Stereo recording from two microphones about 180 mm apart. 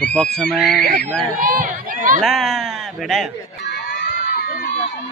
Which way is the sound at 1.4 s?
50° right (ahead or behind).